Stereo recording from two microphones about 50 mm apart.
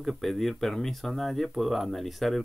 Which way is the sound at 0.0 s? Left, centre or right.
Centre.